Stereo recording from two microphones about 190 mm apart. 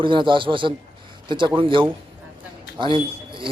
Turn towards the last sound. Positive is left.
turn(degrees=-25)  # may be behind; listen again after turning